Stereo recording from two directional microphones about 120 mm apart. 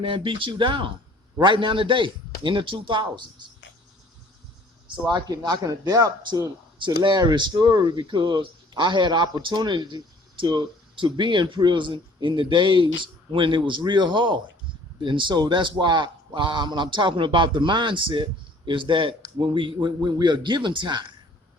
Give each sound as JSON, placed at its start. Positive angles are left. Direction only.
{"t": 0.0, "sound": "a man's voice", "side_deg": -45}
{"t": 5.0, "sound": "a man's voice", "side_deg": -35}